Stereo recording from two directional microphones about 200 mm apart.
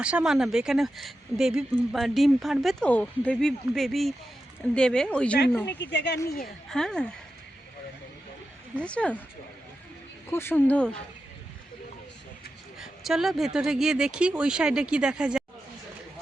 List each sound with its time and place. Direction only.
0.0 s speech: 5° right (ahead or behind); by 5.7 s 10° left (ahead or behind)
5.8 s speech: 60° left (ahead or behind)
6.2 s a woman's voice: 45° left (ahead or behind)
6.7 s speech: 5° left (ahead or behind)
8.8 s speech: 5° left (ahead or behind)
10.2 s speech: 10° left (ahead or behind)
12.8 s speech: centre (ahead or behind)